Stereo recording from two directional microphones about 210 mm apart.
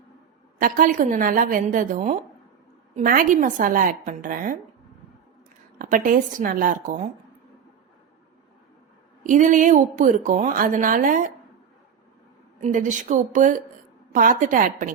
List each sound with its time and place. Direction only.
0.6 s speech: 40° right (ahead or behind)
5.8 s speech: 40° right (ahead or behind)
9.2 s speech: 35° right (ahead or behind)
12.6 s speech: 35° right (ahead or behind)